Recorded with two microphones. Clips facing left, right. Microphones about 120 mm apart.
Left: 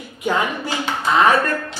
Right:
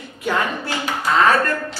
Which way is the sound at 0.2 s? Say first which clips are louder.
Left 1 dB; 15° left (ahead or behind).